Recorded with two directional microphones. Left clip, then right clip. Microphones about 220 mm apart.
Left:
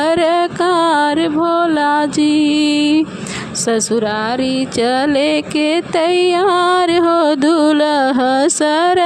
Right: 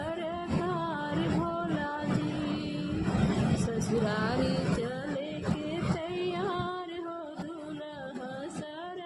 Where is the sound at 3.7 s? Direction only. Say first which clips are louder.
Left 16 dB; 35° left (ahead or behind).